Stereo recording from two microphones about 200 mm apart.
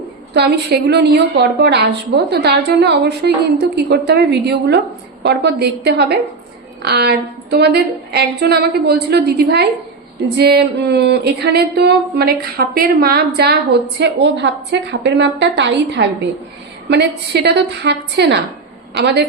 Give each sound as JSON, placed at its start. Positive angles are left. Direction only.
{"t": 0.3, "sound": "a woman's voice", "side_deg": -55}